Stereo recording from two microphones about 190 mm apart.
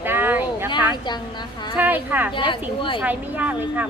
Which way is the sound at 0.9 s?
25° left (ahead or behind).